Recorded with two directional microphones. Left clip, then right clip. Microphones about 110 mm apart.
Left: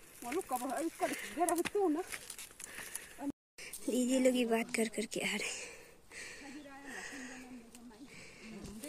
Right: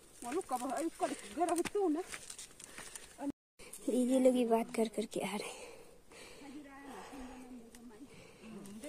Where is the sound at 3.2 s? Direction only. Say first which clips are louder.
Right 1 dB; 5° right (ahead or behind).